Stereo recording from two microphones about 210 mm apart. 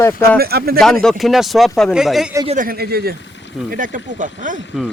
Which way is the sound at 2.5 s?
40° right (ahead or behind).